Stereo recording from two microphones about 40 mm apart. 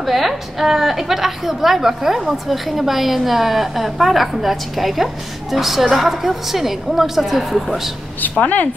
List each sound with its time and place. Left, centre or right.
0.0 s a woman's voice: centre
8.2 s speech: left